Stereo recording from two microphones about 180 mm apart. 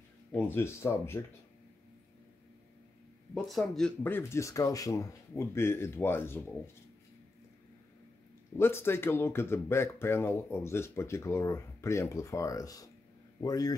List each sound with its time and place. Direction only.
0.3 s speech: 10° left (ahead or behind)
3.3 s speech: centre (ahead or behind)
8.5 s a man's voice: 15° left (ahead or behind)